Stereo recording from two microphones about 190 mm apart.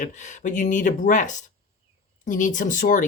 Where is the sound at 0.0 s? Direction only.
45° left (ahead or behind).